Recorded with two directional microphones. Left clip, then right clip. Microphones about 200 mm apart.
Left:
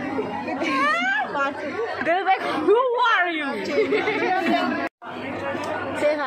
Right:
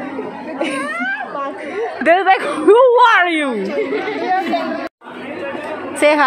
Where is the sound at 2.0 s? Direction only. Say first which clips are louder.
Right 9 dB; 55° right (ahead or behind).